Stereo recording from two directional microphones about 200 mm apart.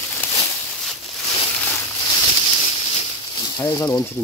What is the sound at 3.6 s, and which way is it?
Speech, 15° left (ahead or behind).